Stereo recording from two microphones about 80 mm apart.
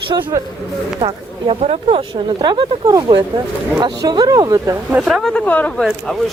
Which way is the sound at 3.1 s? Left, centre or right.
Right.